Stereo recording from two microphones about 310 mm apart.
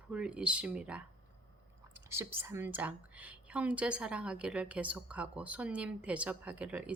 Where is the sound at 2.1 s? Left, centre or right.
Centre.